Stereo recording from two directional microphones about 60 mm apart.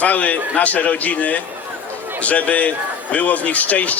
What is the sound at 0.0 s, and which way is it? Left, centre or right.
Speech, left.